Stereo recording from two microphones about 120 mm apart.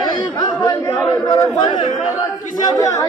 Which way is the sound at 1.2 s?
35° left (ahead or behind).